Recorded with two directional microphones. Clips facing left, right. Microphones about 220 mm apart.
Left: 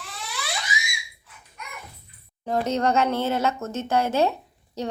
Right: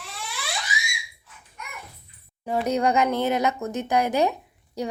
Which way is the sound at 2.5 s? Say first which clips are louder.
Even; 10° right (ahead or behind).